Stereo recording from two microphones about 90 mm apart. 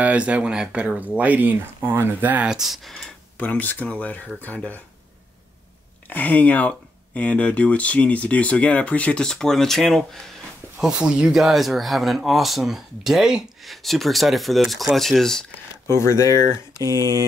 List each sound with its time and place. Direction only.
0.0 s speech: 15° right (ahead or behind)
2.5 s speech: centre (ahead or behind)
3.3 s speech: 20° left (ahead or behind)
6.0 s speech: 20° left (ahead or behind); by 10.0 s 5° left (ahead or behind)
10.8 s speech: 10° right (ahead or behind)
15.9 s speech: 30° left (ahead or behind)
16.8 s a sound: 45° right (ahead or behind)